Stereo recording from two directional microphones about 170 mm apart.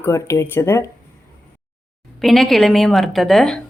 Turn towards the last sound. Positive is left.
turn(degrees=0)  # may be behind; listen again after turning